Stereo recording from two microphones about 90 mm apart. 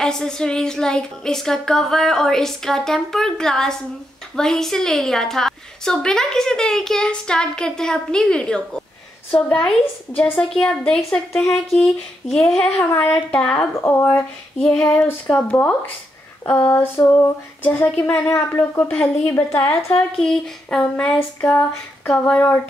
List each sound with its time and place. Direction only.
0.0 s a woman's voice: 5° left (ahead or behind)
12.9 s a woman's voice: 25° left (ahead or behind)
13.3 s a woman's voice: 10° left (ahead or behind)
13.7 s speech: 30° left (ahead or behind)
14.6 s a woman's voice: 10° left (ahead or behind)
18.4 s a woman's voice: 30° left (ahead or behind)
18.8 s a woman's voice: 15° left (ahead or behind)
20.2 s a woman's voice: 5° left (ahead or behind)